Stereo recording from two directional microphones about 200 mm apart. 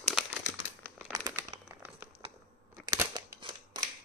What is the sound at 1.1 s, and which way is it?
Crumpling, 15° right (ahead or behind).